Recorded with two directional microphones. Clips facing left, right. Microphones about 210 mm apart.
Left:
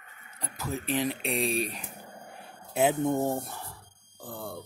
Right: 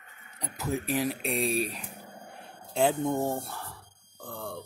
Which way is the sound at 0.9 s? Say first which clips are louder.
Left 2 dB; 5° right (ahead or behind).